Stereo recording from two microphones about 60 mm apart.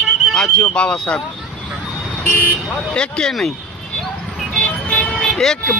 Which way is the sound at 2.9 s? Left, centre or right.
Centre.